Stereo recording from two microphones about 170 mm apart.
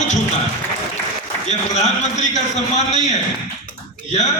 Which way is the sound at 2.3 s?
40° left (ahead or behind).